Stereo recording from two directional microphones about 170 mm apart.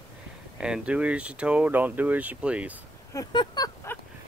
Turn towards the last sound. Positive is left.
turn(degrees=20)  # may be behind; listen again after turning